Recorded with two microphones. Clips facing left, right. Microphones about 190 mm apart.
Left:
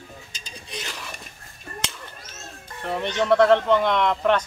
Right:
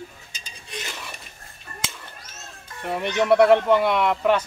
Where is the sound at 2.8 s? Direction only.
10° right (ahead or behind).